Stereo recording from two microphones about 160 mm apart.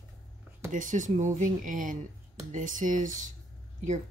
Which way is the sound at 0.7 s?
50° right (ahead or behind).